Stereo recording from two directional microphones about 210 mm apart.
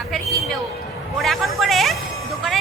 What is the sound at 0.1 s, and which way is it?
Music, centre (ahead or behind).